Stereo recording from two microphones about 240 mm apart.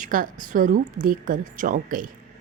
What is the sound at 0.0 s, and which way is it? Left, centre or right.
A woman's voice, right.